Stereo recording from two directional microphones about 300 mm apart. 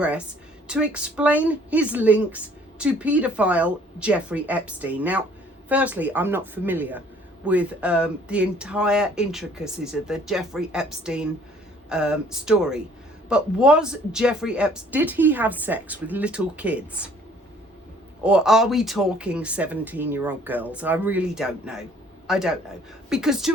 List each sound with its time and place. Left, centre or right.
0.7 s a woman's voice: centre
18.2 s a woman's voice: centre